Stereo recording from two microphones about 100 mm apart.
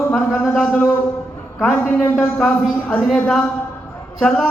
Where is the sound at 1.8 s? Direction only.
5° left (ahead or behind).